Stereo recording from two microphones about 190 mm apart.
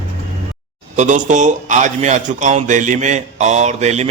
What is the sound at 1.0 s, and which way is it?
A man's voice, 40° right (ahead or behind).